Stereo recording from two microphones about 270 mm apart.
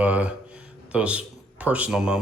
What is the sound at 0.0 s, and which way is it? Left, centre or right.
Speech, centre.